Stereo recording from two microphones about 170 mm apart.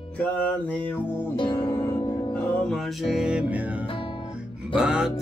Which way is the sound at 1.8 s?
25° left (ahead or behind).